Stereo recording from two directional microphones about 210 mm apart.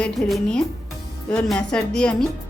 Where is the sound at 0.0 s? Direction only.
Centre (ahead or behind).